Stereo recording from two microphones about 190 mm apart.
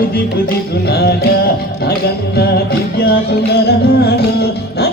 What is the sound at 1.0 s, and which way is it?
Music, 55° left (ahead or behind).